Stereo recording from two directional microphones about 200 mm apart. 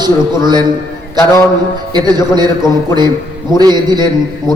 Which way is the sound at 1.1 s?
15° left (ahead or behind).